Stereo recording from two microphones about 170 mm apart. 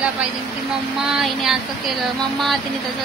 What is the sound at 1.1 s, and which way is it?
Speech, centre (ahead or behind).